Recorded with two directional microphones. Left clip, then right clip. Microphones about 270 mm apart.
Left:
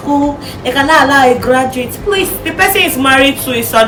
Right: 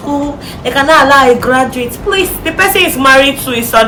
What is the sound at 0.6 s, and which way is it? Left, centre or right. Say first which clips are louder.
A woman's voice: right 2 dB; centre.